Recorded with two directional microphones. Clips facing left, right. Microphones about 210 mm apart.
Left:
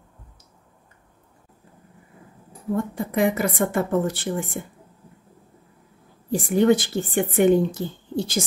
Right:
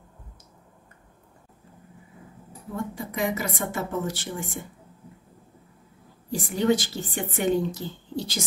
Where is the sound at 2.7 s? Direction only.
55° left (ahead or behind).